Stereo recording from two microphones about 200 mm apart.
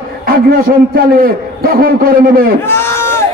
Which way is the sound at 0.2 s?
45° right (ahead or behind).